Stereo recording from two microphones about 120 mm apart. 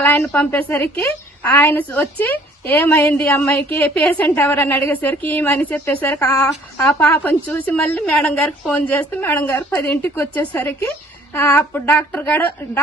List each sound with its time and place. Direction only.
0.0 s a woman's voice: 15° left (ahead or behind)